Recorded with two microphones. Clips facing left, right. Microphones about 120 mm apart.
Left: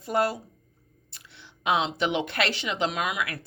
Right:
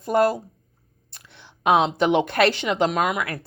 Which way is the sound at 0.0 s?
45° right (ahead or behind).